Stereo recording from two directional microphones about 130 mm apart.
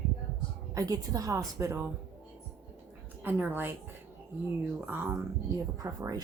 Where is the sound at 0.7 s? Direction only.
25° right (ahead or behind).